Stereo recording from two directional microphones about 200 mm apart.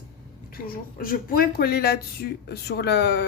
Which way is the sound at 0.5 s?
45° left (ahead or behind).